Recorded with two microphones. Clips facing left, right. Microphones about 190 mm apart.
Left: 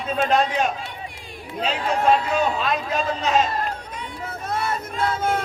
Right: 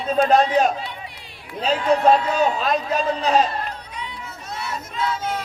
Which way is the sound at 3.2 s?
40° right (ahead or behind).